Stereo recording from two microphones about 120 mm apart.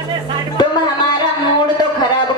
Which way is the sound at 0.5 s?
35° left (ahead or behind).